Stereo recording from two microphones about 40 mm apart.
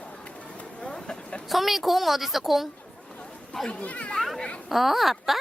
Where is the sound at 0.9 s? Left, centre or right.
Left.